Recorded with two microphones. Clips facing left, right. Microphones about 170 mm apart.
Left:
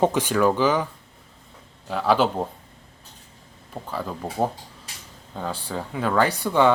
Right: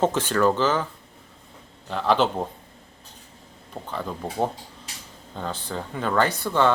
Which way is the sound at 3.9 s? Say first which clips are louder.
Left 1 dB; 5° left (ahead or behind).